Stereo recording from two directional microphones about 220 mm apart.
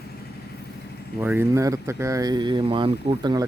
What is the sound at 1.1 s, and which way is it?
Speech, 10° right (ahead or behind).